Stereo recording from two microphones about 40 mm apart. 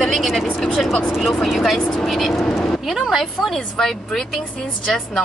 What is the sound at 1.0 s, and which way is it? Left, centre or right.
Speech, centre.